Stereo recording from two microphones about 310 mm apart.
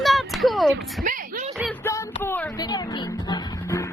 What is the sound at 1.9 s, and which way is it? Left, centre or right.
Music, centre.